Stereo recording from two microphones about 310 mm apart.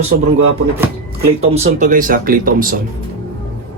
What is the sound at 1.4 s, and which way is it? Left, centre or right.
Speech, centre.